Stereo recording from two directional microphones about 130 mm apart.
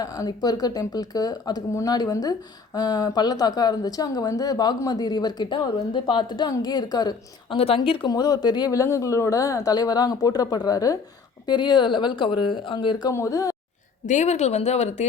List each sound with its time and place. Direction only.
0.0 s a woman's voice: 30° left (ahead or behind)
7.5 s speech: 45° left (ahead or behind)
8.1 s a woman's voice: 30° left (ahead or behind)
13.1 s speech: 25° left (ahead or behind)
14.1 s speech: 65° left (ahead or behind)